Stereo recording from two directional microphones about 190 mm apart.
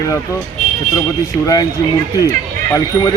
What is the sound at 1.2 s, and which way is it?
Speech, 20° left (ahead or behind).